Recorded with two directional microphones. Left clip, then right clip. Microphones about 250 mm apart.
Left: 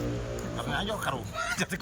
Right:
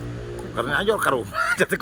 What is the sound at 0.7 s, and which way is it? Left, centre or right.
Speech, centre.